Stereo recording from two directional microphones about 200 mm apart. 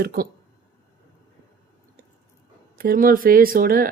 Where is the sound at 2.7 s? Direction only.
45° right (ahead or behind).